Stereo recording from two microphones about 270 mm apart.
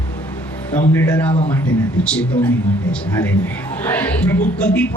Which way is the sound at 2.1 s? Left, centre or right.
Centre.